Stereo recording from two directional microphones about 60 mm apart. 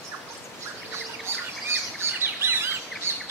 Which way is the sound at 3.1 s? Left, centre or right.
Right.